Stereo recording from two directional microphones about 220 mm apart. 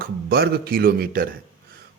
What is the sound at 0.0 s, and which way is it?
Speech, 45° right (ahead or behind).